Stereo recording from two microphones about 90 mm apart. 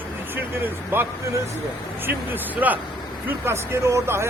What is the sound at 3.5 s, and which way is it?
Speech, 30° right (ahead or behind).